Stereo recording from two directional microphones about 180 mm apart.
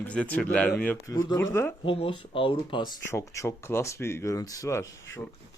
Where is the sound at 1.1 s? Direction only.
20° left (ahead or behind).